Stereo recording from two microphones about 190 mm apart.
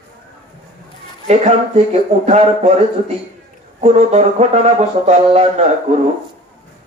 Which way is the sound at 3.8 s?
35° right (ahead or behind).